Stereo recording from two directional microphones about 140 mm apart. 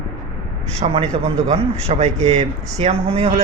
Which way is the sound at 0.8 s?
45° right (ahead or behind).